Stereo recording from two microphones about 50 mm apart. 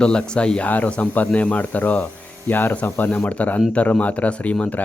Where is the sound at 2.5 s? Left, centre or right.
Left.